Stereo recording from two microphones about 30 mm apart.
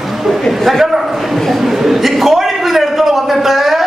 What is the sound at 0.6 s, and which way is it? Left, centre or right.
Speech, centre.